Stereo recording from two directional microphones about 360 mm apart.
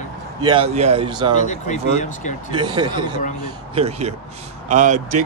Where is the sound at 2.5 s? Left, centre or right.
Centre.